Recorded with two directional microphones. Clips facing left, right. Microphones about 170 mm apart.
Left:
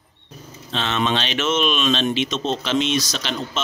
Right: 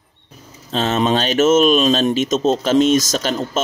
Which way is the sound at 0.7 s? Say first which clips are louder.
Right 5 dB; 40° right (ahead or behind).